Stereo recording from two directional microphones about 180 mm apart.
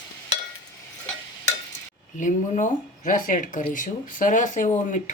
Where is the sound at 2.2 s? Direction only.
45° left (ahead or behind).